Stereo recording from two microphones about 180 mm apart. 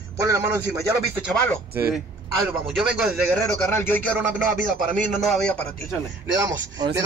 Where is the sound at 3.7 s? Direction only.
10° left (ahead or behind).